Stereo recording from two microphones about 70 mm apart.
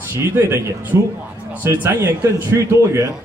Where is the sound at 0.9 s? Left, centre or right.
Right.